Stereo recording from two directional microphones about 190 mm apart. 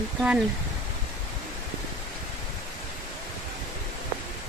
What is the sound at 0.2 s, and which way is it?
Speech, centre (ahead or behind).